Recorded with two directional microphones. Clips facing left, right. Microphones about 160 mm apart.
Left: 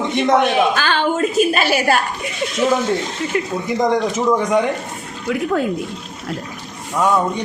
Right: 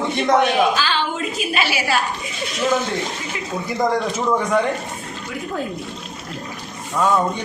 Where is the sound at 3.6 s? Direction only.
20° left (ahead or behind).